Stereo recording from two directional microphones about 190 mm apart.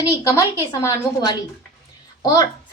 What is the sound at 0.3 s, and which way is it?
A woman's voice, 15° left (ahead or behind).